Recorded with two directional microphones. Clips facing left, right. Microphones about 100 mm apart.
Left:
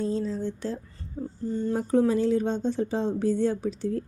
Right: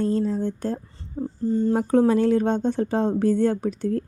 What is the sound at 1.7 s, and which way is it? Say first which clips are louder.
A woman's voice: right 3 dB; 65° right (ahead or behind).